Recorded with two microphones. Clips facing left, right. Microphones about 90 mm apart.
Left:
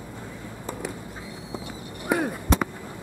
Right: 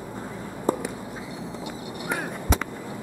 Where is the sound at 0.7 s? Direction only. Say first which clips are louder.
Right 11 dB; 40° right (ahead or behind).